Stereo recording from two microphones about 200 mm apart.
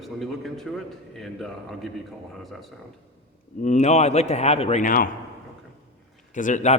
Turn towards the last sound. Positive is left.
turn(degrees=35)  # may be behind; listen again after turning